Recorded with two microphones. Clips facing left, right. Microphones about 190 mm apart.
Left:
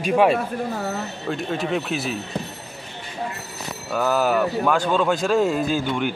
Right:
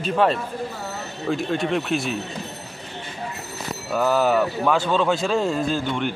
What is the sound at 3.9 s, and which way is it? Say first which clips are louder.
Speech: right 1 dB; centre (ahead or behind).